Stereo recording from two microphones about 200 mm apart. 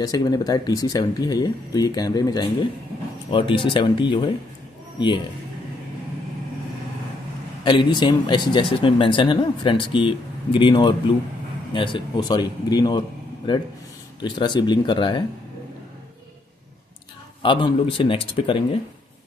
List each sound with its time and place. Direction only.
0.0 s a man's voice: 20° left (ahead or behind)
7.6 s speech: 25° left (ahead or behind)
17.4 s speech: 25° left (ahead or behind)